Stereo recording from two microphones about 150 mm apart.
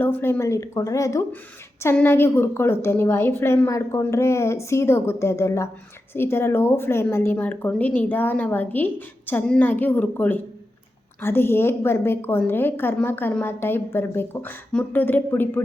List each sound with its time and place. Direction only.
0.0 s a woman's voice: 15° left (ahead or behind)